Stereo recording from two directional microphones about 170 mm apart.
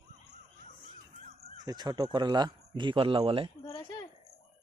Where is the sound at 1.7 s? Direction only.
25° right (ahead or behind).